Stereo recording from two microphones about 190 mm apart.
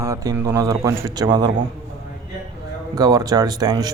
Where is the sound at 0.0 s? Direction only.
15° right (ahead or behind).